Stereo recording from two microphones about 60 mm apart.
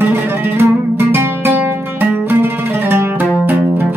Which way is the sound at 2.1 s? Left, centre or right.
Right.